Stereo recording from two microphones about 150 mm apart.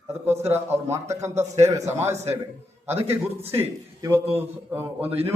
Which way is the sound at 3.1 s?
15° right (ahead or behind).